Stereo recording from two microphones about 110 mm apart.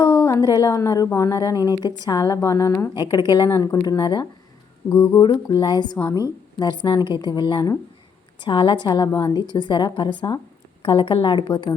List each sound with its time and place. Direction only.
0.0 s a woman's voice: 35° left (ahead or behind)
2.9 s a woman's voice: 40° left (ahead or behind)
4.9 s speech: 20° left (ahead or behind)
5.2 s a woman's voice: 45° left (ahead or behind)
10.8 s a woman's voice: 55° left (ahead or behind)